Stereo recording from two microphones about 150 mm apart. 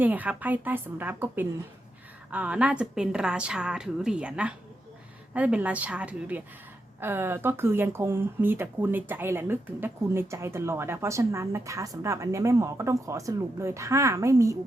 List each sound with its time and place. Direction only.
0.0 s speech: 10° right (ahead or behind)